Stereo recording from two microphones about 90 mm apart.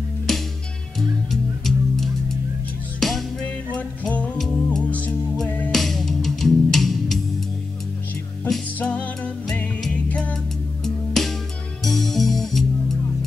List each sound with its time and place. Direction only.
0.3 s music: 5° left (ahead or behind)
3.4 s music: 15° left (ahead or behind)
5.7 s music: centre (ahead or behind)
8.8 s music: 15° left (ahead or behind)